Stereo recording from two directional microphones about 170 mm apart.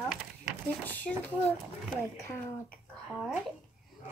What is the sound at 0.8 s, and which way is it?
Speech, 10° left (ahead or behind).